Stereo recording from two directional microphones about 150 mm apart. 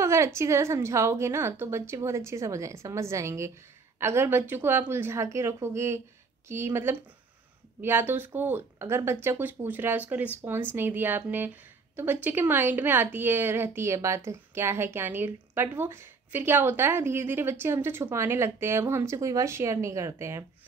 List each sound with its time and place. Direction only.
0.0 s a woman's voice: 20° right (ahead or behind)